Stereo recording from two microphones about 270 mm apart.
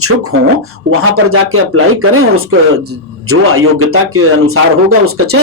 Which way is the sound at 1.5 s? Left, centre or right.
Right.